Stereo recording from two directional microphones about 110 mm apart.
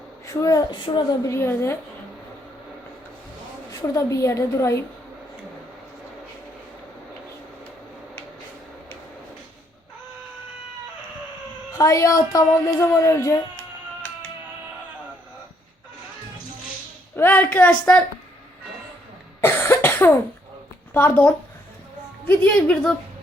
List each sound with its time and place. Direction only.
0.3 s a woman's voice: 30° left (ahead or behind)
1.3 s speech: 20° left (ahead or behind)
3.7 s speech: 30° left (ahead or behind)
11.8 s speech: 30° left (ahead or behind)
17.2 s a woman's voice: 15° left (ahead or behind)
19.4 s cough: 20° left (ahead or behind)
20.9 s a woman's voice: 15° left (ahead or behind)